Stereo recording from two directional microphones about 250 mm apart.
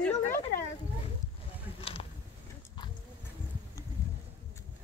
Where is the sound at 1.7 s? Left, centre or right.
Left.